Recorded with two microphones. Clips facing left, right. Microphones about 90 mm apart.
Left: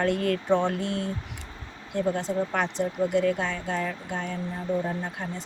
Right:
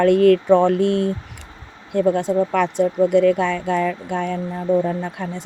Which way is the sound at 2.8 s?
75° right (ahead or behind).